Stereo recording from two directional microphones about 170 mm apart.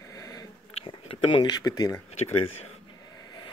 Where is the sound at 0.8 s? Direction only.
30° left (ahead or behind).